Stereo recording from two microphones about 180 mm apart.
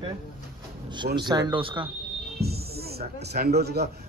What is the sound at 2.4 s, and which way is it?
Speech, 60° right (ahead or behind).